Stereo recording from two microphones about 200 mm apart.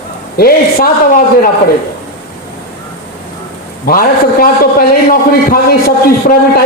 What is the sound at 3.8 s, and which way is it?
A man's voice, 45° left (ahead or behind).